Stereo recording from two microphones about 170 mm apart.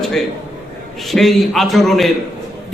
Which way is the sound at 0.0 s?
Centre (ahead or behind).